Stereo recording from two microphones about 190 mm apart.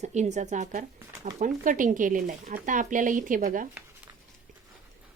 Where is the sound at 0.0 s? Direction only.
35° right (ahead or behind).